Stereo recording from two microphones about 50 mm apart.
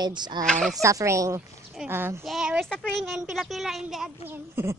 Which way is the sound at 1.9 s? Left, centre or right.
Right.